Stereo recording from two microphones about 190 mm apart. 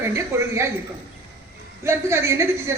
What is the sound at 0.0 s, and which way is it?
Speech, 15° right (ahead or behind).